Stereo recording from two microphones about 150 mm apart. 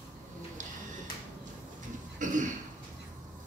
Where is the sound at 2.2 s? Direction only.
60° right (ahead or behind).